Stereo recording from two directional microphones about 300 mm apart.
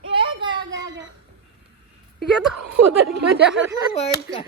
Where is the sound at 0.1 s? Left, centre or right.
Centre.